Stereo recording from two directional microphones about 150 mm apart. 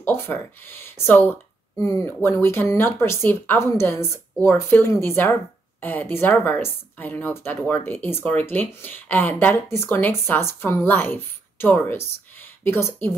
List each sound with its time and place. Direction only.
0.0 s a woman's voice: 15° left (ahead or behind)